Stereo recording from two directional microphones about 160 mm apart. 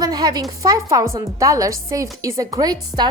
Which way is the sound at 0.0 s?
25° right (ahead or behind).